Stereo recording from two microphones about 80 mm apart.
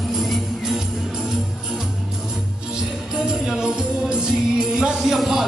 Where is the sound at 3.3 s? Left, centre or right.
Centre.